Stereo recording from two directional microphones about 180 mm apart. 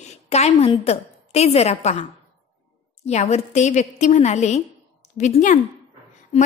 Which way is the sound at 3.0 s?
35° left (ahead or behind).